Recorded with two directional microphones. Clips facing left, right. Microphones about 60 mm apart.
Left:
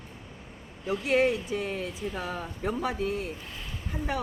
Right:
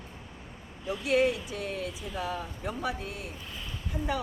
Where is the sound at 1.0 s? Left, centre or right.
Left.